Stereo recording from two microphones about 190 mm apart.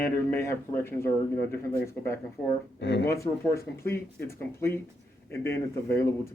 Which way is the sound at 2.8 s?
70° left (ahead or behind).